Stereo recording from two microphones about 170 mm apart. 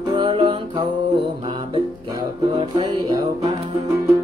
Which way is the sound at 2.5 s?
25° right (ahead or behind).